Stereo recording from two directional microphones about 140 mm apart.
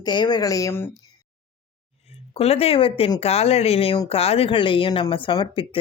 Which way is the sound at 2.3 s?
45° left (ahead or behind).